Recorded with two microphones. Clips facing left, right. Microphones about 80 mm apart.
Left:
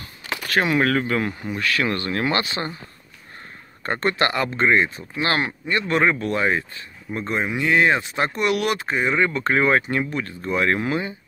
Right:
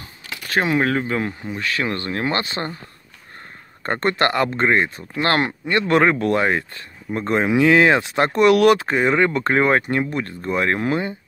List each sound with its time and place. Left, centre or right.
0.5 s speech: centre
2.4 s speech: right
3.8 s speech: right
7.4 s speech: right